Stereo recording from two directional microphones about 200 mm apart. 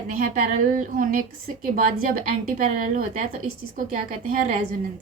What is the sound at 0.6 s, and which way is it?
A woman's voice, 40° right (ahead or behind).